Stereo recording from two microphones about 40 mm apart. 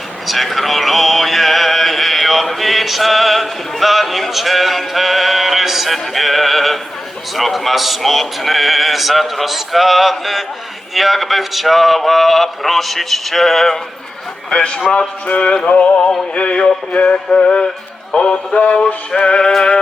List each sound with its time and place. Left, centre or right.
0.3 s a sound: centre
7.3 s speech: centre
14.5 s a man's voice: left
18.1 s music: left
19.1 s a man's voice: left